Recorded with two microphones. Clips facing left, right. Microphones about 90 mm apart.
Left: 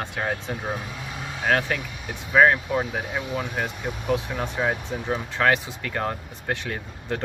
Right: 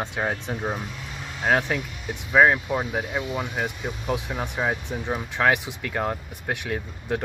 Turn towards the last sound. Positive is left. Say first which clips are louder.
# right 2 dB
turn(degrees=-10)  # may be behind; listen again after turning